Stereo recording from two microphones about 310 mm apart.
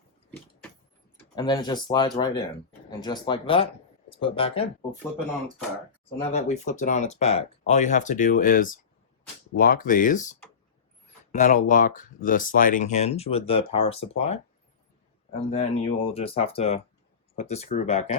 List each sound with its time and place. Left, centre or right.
0.3 s vehicle: centre
1.1 s speech: centre
6.3 s speech: left
15.3 s speech: centre